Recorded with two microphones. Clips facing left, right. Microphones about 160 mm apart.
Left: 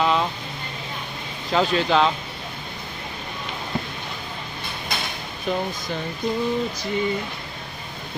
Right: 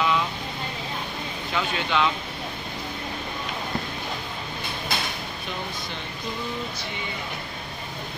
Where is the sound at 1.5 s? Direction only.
35° left (ahead or behind).